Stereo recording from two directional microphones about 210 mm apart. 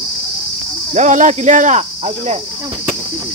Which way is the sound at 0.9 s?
35° right (ahead or behind).